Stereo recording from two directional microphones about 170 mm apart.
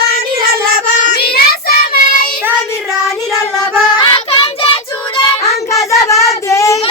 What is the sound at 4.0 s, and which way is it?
Child singing, 30° left (ahead or behind).